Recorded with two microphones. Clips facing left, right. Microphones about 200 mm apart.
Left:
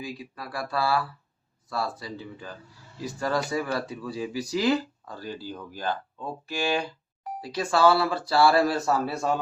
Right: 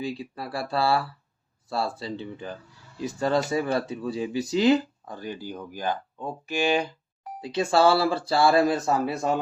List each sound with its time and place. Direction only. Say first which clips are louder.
0.0 s speech: right 5 dB; 30° right (ahead or behind)